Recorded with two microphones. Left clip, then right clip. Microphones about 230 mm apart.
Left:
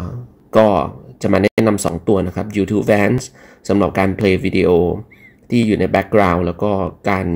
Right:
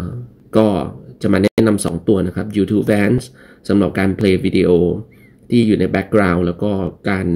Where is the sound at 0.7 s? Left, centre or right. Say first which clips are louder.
Left 4 dB; left.